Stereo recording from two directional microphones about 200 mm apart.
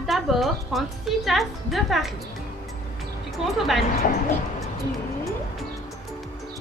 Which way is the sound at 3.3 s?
Centre (ahead or behind).